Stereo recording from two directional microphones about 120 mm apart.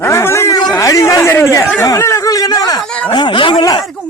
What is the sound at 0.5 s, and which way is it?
Speech, 35° left (ahead or behind).